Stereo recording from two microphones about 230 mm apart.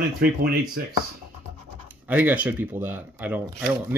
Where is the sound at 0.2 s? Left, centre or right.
Right.